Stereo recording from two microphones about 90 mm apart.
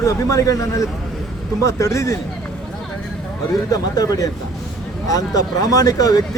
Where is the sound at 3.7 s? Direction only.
45° left (ahead or behind).